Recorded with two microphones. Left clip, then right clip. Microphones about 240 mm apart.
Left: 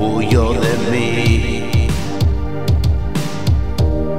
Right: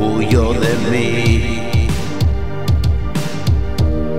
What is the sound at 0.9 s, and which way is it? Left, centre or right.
Music, right.